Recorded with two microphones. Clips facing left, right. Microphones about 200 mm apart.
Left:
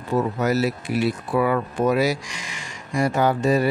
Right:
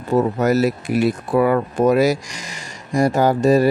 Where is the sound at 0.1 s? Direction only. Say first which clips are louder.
Right 5 dB; 45° right (ahead or behind).